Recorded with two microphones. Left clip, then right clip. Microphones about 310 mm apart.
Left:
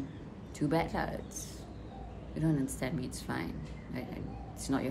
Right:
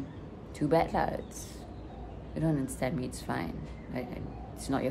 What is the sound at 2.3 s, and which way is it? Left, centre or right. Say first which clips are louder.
Speech: right 1 dB; centre.